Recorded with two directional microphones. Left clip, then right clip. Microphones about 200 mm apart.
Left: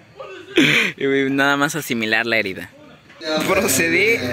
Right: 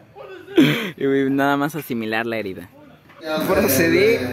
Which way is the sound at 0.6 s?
15° right (ahead or behind).